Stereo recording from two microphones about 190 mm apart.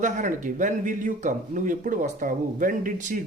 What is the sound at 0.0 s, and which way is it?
Speech, 40° right (ahead or behind).